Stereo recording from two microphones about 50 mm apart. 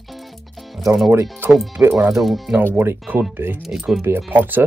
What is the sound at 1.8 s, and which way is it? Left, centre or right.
Speech, right.